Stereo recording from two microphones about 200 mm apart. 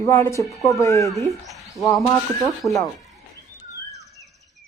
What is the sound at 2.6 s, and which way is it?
Speech, 15° left (ahead or behind).